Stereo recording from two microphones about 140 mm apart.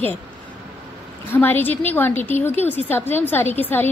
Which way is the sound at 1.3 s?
15° left (ahead or behind).